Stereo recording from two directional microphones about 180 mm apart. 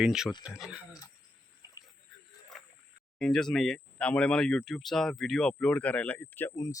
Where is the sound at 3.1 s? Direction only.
5° left (ahead or behind).